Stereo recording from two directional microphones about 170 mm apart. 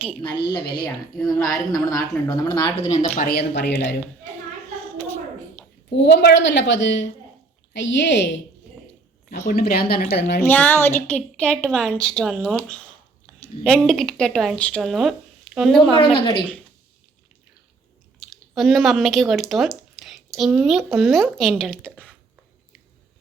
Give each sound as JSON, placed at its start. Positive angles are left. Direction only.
{"t": 0.9, "sound": "a woman's voice", "side_deg": 0}
{"t": 1.4, "sound": "a woman's voice", "side_deg": 20}
{"t": 2.8, "sound": "speech", "side_deg": 45}
{"t": 3.2, "sound": "speech", "side_deg": 70}
{"t": 5.0, "sound": "a sound", "side_deg": 10}
{"t": 6.1, "sound": "a woman's voice", "side_deg": 90}
{"t": 9.5, "sound": "a woman's voice", "side_deg": 65}
{"t": 10.4, "sound": "a woman's voice", "side_deg": 10}
{"t": 16.0, "sound": "a woman's voice", "side_deg": 30}
{"t": 18.2, "sound": "speech", "side_deg": 0}